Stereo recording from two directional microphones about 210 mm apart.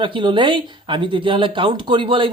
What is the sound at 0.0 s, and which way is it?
Speech, 20° right (ahead or behind).